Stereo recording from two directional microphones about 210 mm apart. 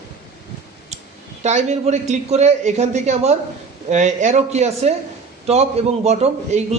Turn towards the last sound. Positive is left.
turn(degrees=-30)  # may be behind; listen again after turning